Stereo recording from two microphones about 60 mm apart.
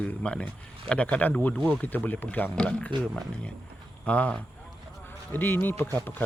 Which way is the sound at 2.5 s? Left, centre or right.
Centre.